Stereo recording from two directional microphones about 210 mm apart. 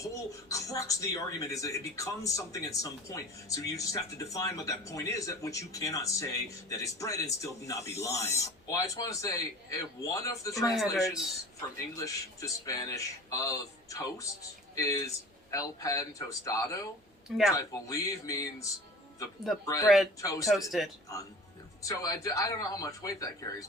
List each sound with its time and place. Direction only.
0.0 s speech: 15° left (ahead or behind)
11.9 s speech: 15° left (ahead or behind)
17.2 s speech: centre (ahead or behind)
17.6 s speech: 15° left (ahead or behind)
20.5 s speech: centre (ahead or behind)
21.8 s speech: 15° left (ahead or behind)